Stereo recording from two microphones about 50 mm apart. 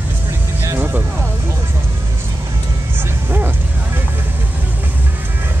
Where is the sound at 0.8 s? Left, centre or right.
Right.